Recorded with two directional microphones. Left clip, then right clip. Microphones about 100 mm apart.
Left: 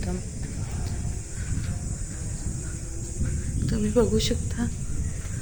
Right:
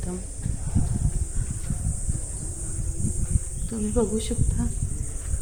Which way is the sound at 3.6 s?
10° left (ahead or behind).